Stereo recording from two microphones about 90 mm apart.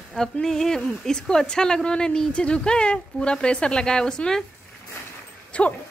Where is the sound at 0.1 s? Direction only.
5° left (ahead or behind).